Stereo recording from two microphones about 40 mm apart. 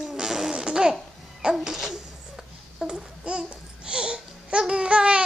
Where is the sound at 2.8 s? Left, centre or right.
Right.